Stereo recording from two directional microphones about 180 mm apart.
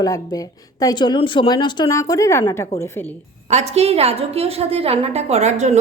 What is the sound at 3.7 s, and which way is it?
A woman's voice, 35° right (ahead or behind).